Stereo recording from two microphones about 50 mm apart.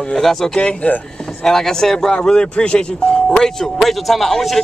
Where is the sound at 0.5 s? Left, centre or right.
Centre.